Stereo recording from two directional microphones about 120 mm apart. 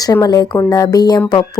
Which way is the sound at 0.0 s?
30° left (ahead or behind).